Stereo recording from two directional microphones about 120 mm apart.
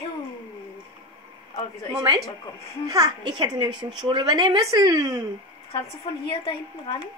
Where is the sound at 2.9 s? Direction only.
35° right (ahead or behind).